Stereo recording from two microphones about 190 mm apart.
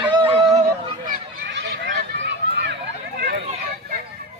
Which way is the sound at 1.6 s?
65° right (ahead or behind).